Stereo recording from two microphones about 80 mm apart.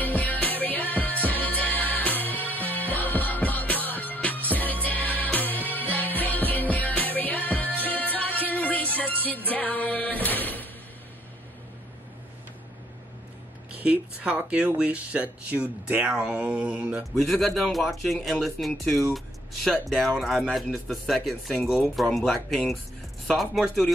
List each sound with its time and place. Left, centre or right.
0.0 s music: left
13.7 s speech: centre
17.1 s speech: centre